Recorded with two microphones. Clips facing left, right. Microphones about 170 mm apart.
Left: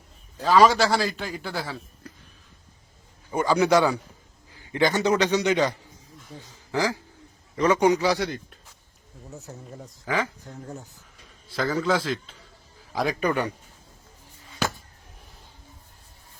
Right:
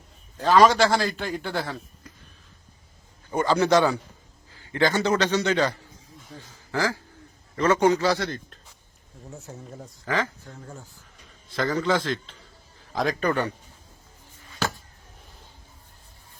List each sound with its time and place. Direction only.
0.3 s a man's voice: centre (ahead or behind)
3.3 s a man's voice: 10° left (ahead or behind)
9.3 s a man's voice: centre (ahead or behind)
10.1 s a man's voice: 15° left (ahead or behind)
11.5 s a man's voice: 5° left (ahead or behind)